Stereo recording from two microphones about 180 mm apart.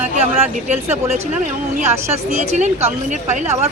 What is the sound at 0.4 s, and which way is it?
A woman's voice, 35° right (ahead or behind).